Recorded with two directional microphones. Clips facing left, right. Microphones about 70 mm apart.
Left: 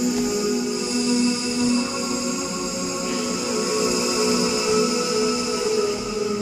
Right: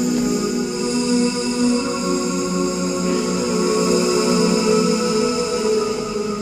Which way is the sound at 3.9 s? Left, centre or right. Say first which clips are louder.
Right 5 dB; right.